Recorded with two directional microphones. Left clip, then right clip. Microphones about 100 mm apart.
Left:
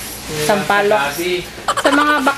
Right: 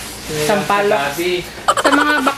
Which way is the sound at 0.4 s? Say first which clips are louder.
Left 1 dB; 20° right (ahead or behind).